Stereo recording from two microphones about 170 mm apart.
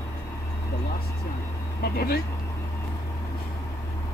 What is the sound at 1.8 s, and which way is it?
Speech, 65° left (ahead or behind).